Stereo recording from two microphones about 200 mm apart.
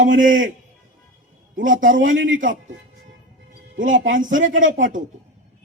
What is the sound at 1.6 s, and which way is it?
Speech, 40° right (ahead or behind).